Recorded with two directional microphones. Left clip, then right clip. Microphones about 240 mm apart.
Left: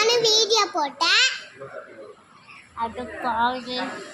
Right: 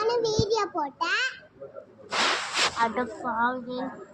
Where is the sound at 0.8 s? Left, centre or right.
Centre.